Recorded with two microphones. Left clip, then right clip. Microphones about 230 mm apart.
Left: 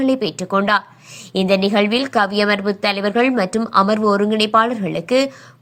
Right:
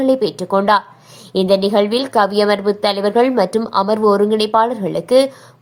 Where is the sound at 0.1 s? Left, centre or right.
Left.